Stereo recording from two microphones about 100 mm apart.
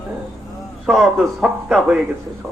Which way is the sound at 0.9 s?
Centre (ahead or behind).